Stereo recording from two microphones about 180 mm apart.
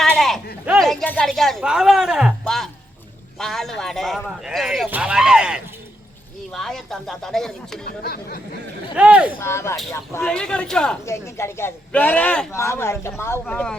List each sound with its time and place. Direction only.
0.2 s speech: centre (ahead or behind)
7.9 s a sound: 55° left (ahead or behind)
9.0 s speech: 5° right (ahead or behind)
9.4 s speech: 15° left (ahead or behind)
10.2 s speech: 5° left (ahead or behind)
11.0 s speech: 15° left (ahead or behind)